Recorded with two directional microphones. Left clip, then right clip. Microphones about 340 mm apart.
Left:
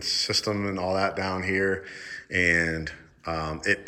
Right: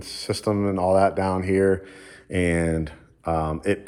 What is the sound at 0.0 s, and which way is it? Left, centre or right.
Speech, centre.